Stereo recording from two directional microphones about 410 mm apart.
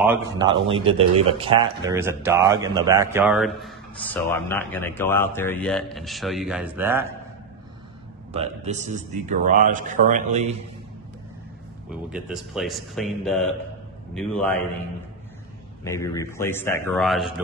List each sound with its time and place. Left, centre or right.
0.0 s a man's voice: centre
8.3 s a man's voice: centre
11.9 s a man's voice: centre
15.8 s a man's voice: centre